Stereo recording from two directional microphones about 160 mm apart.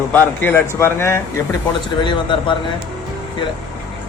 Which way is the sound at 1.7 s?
30° left (ahead or behind).